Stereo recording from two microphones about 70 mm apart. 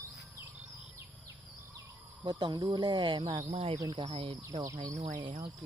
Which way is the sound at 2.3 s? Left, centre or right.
Right.